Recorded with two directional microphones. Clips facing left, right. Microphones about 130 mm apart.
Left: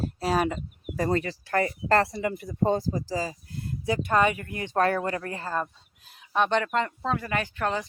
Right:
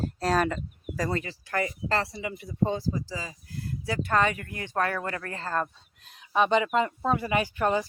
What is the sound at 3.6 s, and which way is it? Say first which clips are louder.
Speech: left 3 dB; 20° left (ahead or behind).